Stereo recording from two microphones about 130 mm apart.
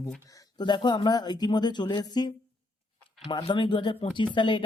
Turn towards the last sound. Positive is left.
turn(degrees=40)  # may be behind; listen again after turning